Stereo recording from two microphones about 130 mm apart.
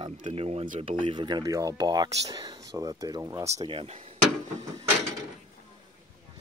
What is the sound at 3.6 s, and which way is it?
Speech, 50° right (ahead or behind).